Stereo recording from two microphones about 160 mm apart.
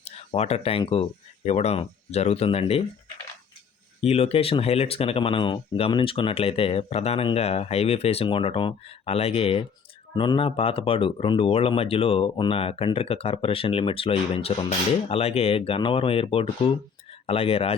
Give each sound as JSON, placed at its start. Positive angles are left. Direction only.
{"t": 0.2, "sound": "speech", "side_deg": 40}
{"t": 4.0, "sound": "speech", "side_deg": 40}